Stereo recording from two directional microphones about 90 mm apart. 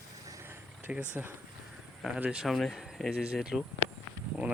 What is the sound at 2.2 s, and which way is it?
Speech, 5° right (ahead or behind).